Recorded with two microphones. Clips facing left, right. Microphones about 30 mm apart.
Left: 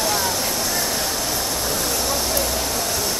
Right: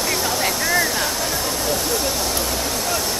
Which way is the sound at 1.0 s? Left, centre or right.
Centre.